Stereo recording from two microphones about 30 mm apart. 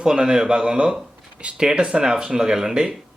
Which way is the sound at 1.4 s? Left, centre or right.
Right.